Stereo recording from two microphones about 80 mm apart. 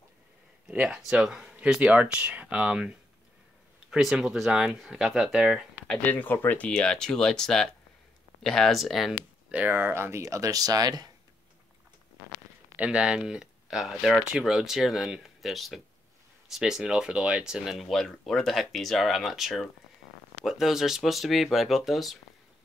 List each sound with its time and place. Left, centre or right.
0.7 s speech: centre
6.0 s speech: left; by 9.1 s centre
9.5 s speech: right
12.7 s speech: centre